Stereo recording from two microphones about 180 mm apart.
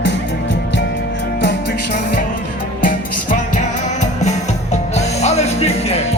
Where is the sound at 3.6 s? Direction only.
40° left (ahead or behind).